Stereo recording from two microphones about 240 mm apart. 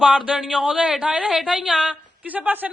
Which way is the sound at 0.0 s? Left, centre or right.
Centre.